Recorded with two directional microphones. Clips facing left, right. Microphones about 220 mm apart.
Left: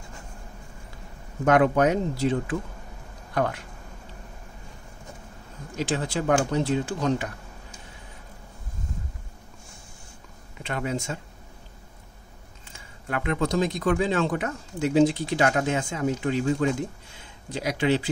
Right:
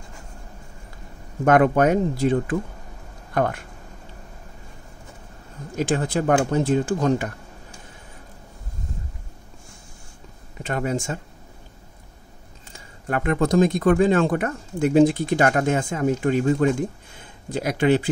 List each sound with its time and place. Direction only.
1.4 s speech: 50° right (ahead or behind)
5.8 s speech: 50° right (ahead or behind)
10.6 s speech: 45° right (ahead or behind)
12.7 s speech: 45° right (ahead or behind)